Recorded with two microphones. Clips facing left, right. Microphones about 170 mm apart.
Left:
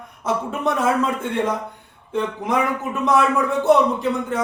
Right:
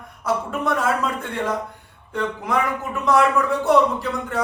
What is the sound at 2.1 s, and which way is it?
Speech, 20° left (ahead or behind).